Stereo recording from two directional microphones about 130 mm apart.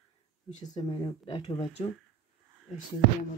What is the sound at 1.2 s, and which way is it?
Speech, 45° left (ahead or behind).